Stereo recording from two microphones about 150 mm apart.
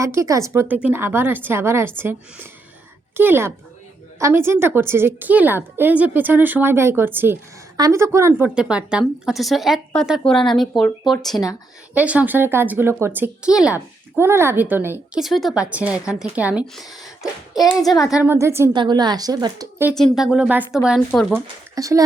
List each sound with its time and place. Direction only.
0.0 s a woman's voice: 20° right (ahead or behind)
8.3 s a woman's voice: 5° right (ahead or behind)
14.2 s a woman's voice: 15° right (ahead or behind)
15.1 s a woman's voice: centre (ahead or behind)
18.1 s a woman's voice: 10° right (ahead or behind)
18.7 s a woman's voice: 30° right (ahead or behind)
20.0 s speech: centre (ahead or behind)
21.1 s speech: 5° left (ahead or behind)
21.8 s a woman's voice: 25° right (ahead or behind)